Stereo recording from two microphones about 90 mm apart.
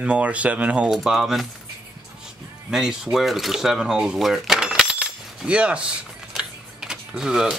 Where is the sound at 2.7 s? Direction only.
5° right (ahead or behind).